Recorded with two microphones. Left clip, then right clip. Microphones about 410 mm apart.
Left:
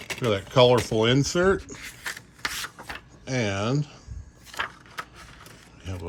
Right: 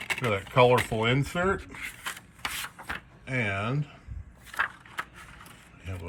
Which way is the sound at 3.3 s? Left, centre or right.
Centre.